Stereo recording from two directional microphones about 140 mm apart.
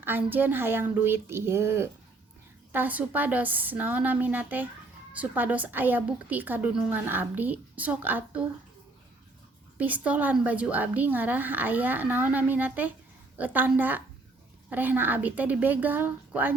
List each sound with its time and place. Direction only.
0.0 s a woman's voice: 15° right (ahead or behind)
9.7 s a woman's voice: 10° right (ahead or behind)